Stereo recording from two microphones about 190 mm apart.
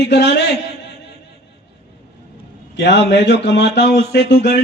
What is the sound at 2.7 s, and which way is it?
A man's voice, 65° left (ahead or behind).